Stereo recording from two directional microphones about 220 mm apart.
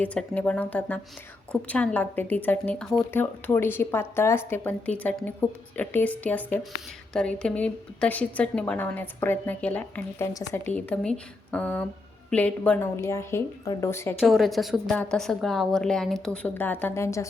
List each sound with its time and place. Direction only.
0.0 s a woman's voice: 5° left (ahead or behind)
14.2 s a woman's voice: centre (ahead or behind)